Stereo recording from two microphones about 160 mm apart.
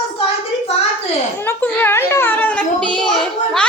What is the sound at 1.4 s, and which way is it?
A child's voice, 10° left (ahead or behind).